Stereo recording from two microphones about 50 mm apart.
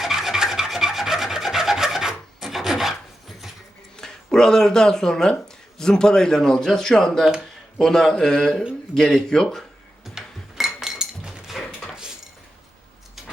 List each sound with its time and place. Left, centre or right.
0.0 s filing: centre
3.9 s a man's voice: centre
10.0 s a sound: centre
11.4 s dog: centre
11.9 s cutlery: centre
13.2 s a sound: centre